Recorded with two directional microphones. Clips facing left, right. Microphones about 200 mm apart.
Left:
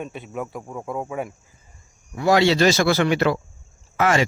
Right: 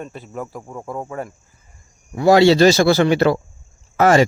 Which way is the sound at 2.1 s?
30° right (ahead or behind).